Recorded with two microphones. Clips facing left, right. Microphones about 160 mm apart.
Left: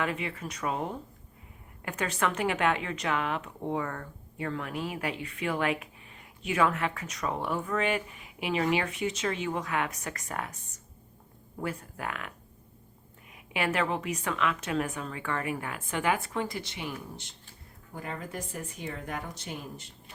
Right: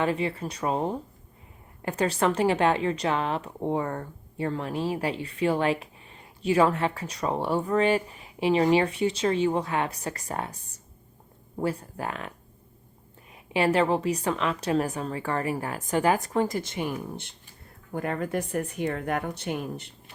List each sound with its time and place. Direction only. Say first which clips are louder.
0.0 s a woman's voice: right 6 dB; 30° right (ahead or behind)
13.3 s a woman's voice: right 7 dB; 30° right (ahead or behind); by 19.9 s 60° right (ahead or behind)